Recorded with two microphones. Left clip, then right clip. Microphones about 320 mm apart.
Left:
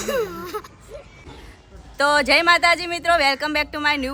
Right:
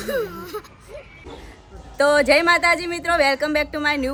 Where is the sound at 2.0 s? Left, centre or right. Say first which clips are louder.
Right 1 dB; centre.